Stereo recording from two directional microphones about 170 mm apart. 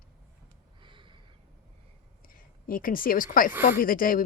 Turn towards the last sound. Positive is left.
turn(degrees=55)  # may be behind; listen again after turning